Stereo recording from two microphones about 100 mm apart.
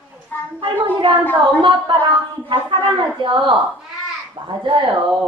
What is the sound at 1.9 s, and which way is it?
A woman's voice, 50° right (ahead or behind).